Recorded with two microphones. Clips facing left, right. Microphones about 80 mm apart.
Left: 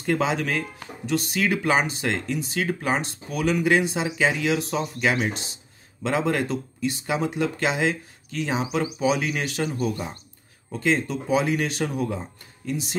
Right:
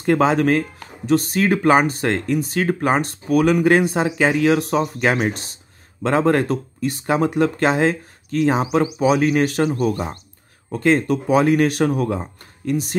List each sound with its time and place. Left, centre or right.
0.0 s speech: right